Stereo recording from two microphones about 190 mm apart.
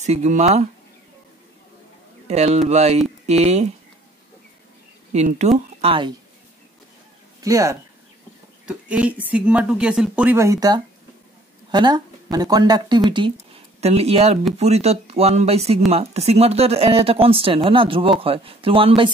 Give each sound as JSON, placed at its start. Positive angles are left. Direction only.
{"t": 0.0, "sound": "speech", "side_deg": -35}
{"t": 2.2, "sound": "speech", "side_deg": -35}
{"t": 5.1, "sound": "speech", "side_deg": -35}
{"t": 7.3, "sound": "speech", "side_deg": -15}
{"t": 8.6, "sound": "a woman's voice", "side_deg": -5}